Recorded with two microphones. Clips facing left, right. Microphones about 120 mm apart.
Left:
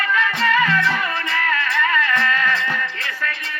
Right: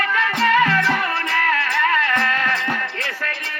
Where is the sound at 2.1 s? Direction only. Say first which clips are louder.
Even; 50° right (ahead or behind).